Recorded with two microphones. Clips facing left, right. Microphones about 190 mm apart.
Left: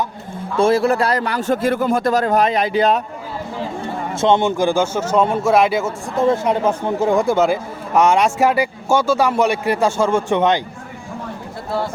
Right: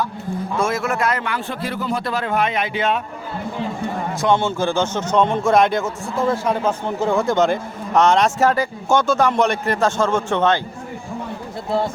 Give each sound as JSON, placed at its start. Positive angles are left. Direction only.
{"t": 0.5, "sound": "a man's voice", "side_deg": 30}
{"t": 4.1, "sound": "a man's voice", "side_deg": 25}
{"t": 6.1, "sound": "a man's voice", "side_deg": 20}